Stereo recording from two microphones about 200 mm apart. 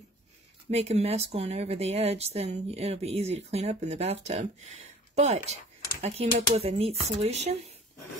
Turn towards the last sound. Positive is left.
turn(degrees=-35)  # may be behind; listen again after turning